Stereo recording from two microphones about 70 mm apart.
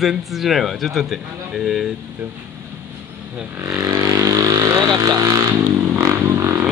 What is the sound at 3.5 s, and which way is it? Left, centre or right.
Vehicle, right.